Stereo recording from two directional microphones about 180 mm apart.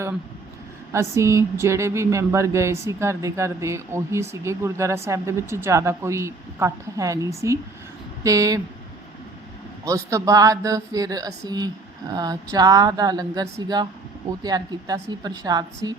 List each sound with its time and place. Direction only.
0.9 s speech: 15° right (ahead or behind)
9.8 s speech: 15° right (ahead or behind)